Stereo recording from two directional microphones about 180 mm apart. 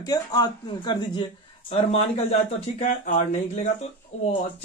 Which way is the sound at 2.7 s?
40° left (ahead or behind).